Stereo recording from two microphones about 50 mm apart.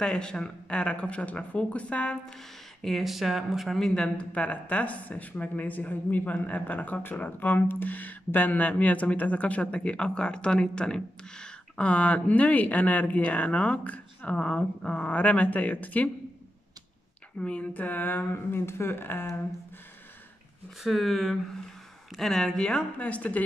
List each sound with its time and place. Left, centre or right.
0.0 s speech: centre
2.8 s speech: centre
3.9 s speech: centre
4.3 s speech: left
11.8 s speech: left
17.4 s speech: left
20.8 s speech: centre
22.9 s speech: left